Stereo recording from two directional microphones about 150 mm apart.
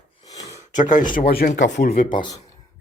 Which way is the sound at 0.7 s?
55° left (ahead or behind).